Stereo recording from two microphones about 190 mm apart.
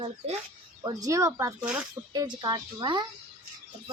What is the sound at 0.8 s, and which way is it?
Speech, 15° right (ahead or behind).